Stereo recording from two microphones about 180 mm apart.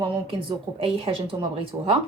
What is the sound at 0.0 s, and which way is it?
Speech, 30° right (ahead or behind).